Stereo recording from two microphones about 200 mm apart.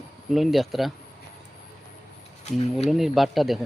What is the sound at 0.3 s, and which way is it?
Speech, centre (ahead or behind).